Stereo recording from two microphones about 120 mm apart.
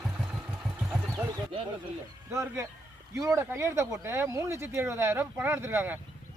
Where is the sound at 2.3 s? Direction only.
25° right (ahead or behind).